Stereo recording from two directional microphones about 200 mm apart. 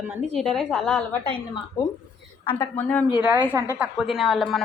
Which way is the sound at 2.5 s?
10° left (ahead or behind).